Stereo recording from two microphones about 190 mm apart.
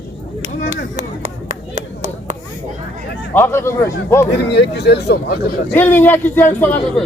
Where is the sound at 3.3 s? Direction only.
10° left (ahead or behind).